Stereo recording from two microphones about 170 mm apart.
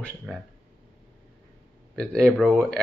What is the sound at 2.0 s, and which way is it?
Speech, 5° left (ahead or behind).